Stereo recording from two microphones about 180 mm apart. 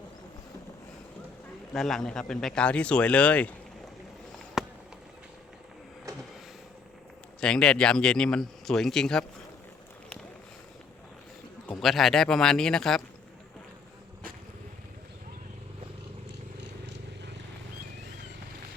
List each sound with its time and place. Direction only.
1.7 s a man's voice: centre (ahead or behind)
4.6 s a sound: centre (ahead or behind)
7.4 s a man's voice: 5° left (ahead or behind)
11.8 s a man's voice: centre (ahead or behind)